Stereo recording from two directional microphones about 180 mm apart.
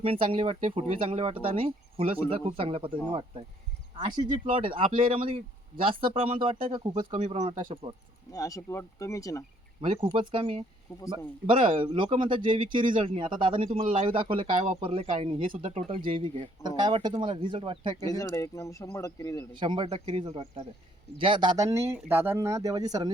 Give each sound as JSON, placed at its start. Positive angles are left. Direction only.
{"t": 0.0, "sound": "speech", "side_deg": -30}
{"t": 4.5, "sound": "speech", "side_deg": -30}
{"t": 5.9, "sound": "speech", "side_deg": -50}
{"t": 6.1, "sound": "speech", "side_deg": -30}
{"t": 8.3, "sound": "speech", "side_deg": 20}
{"t": 10.0, "sound": "speech", "side_deg": -30}
{"t": 18.0, "sound": "speech", "side_deg": 20}
{"t": 19.5, "sound": "speech", "side_deg": -25}